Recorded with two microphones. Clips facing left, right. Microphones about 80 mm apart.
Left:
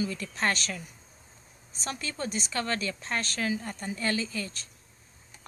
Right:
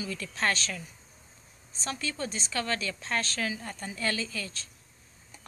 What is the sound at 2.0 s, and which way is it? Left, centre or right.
A woman's voice, left.